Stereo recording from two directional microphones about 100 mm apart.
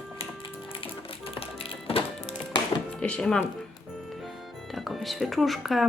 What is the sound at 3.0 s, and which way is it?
Music, 10° left (ahead or behind).